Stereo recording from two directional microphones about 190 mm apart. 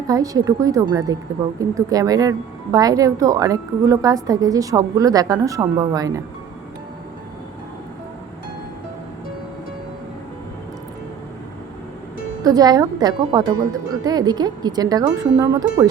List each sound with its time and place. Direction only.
0.1 s a woman's voice: 20° right (ahead or behind)
12.4 s a woman's voice: 20° right (ahead or behind)